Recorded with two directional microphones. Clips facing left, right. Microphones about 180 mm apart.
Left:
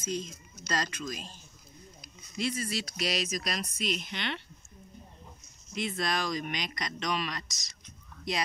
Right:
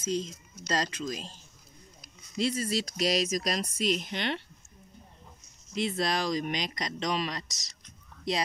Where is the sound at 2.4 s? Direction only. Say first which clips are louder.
Right 4 dB; 40° right (ahead or behind).